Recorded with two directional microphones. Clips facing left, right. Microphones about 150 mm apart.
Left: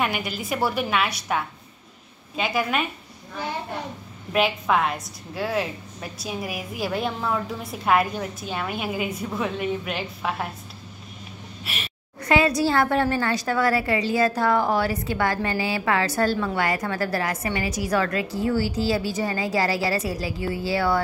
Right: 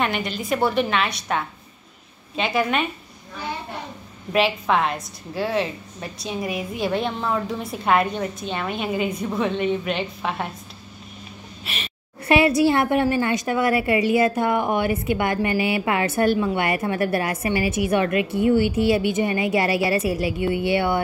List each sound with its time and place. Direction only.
0.0 s a woman's voice: 5° left (ahead or behind)
4.3 s a woman's voice: 5° left (ahead or behind)
11.6 s speech: 5° left (ahead or behind)
12.2 s a woman's voice: 25° right (ahead or behind)